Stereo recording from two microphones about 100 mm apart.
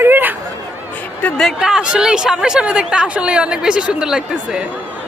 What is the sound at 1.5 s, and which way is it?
Speech, 5° right (ahead or behind).